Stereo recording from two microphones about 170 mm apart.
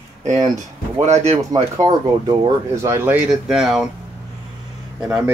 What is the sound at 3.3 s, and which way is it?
Speech, centre (ahead or behind).